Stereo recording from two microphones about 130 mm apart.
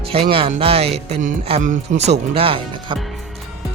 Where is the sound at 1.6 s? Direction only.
75° right (ahead or behind).